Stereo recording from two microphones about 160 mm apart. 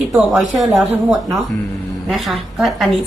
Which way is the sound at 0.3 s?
Centre (ahead or behind).